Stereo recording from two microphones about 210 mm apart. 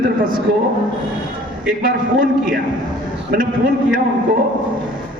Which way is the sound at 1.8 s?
40° right (ahead or behind).